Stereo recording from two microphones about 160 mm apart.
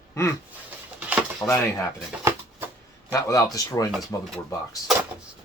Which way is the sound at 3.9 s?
Centre (ahead or behind).